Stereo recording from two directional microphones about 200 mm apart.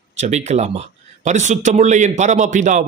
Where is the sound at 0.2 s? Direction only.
35° right (ahead or behind).